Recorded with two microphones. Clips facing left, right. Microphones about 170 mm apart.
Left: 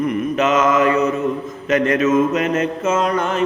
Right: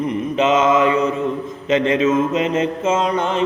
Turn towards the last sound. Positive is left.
turn(degrees=-25)  # may be behind; listen again after turning